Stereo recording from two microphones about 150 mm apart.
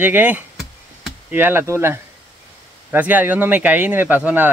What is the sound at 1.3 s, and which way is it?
Speech, 15° right (ahead or behind).